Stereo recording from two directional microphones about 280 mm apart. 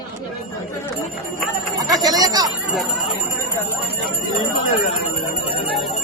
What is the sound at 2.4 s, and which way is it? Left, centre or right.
Bell, centre.